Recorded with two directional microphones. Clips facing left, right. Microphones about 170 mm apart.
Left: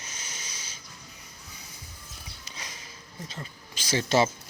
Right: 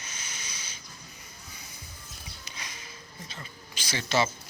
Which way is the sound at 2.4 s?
40° left (ahead or behind).